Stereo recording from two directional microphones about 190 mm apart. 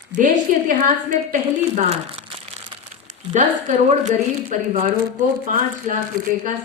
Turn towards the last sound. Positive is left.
turn(degrees=-45)  # may be behind; listen again after turning